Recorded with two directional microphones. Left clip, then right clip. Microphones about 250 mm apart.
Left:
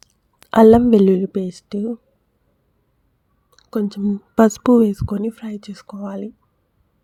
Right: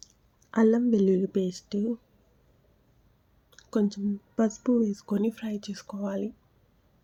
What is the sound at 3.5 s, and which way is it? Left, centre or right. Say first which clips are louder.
Speech: left 5 dB; centre.